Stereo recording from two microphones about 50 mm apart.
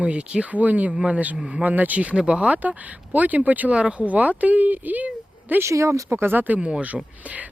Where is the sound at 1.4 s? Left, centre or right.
Centre.